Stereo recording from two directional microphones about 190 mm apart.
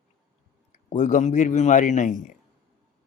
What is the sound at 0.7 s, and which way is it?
A man's voice, 40° left (ahead or behind).